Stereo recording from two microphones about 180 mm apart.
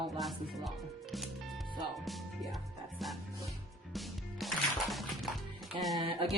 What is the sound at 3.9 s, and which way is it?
Music, centre (ahead or behind).